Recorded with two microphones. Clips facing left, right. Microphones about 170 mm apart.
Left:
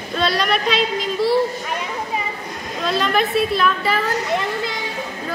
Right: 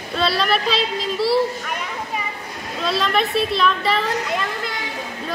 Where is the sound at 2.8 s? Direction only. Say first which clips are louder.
Left 1 dB; centre (ahead or behind).